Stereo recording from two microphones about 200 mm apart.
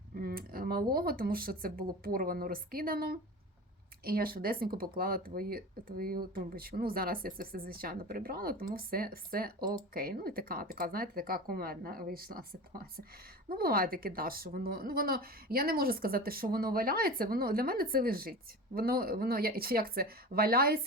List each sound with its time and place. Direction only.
0.2 s speech: 50° right (ahead or behind)
13.5 s speech: 50° right (ahead or behind)